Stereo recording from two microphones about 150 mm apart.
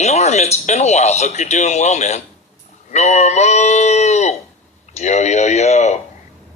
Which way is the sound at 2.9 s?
50° left (ahead or behind).